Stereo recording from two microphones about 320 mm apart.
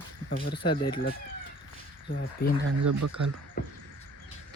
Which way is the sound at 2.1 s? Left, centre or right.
Left.